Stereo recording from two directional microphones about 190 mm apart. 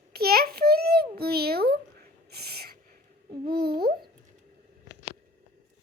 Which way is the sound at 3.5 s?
55° right (ahead or behind).